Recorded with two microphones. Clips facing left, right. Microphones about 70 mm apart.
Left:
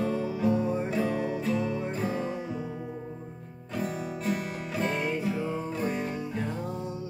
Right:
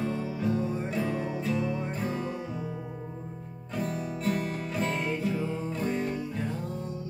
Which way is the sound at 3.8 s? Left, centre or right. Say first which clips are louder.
Even; centre.